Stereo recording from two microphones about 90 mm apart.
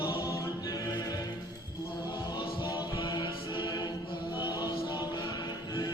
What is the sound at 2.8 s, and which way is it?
Chant, 60° left (ahead or behind).